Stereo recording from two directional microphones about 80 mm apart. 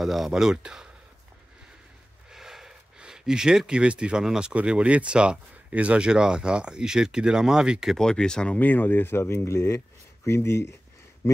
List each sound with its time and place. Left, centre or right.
0.0 s speech: centre
2.3 s a sound: centre
4.6 s speech: centre
8.0 s speech: centre
8.5 s speech: left